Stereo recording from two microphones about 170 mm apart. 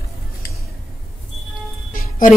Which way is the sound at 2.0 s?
55° left (ahead or behind).